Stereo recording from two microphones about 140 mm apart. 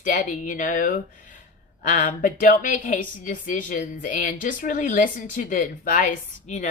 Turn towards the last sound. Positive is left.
turn(degrees=55)  # may be behind; listen again after turning